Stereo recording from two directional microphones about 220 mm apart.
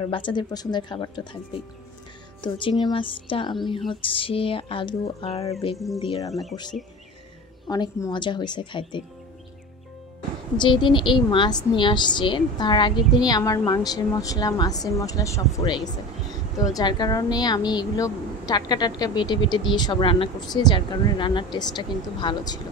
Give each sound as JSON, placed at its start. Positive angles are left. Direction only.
{"t": 0.0, "sound": "a woman's voice", "side_deg": 20}
{"t": 2.4, "sound": "a woman's voice", "side_deg": 20}
{"t": 7.6, "sound": "a woman's voice", "side_deg": 15}
{"t": 10.6, "sound": "a woman's voice", "side_deg": 20}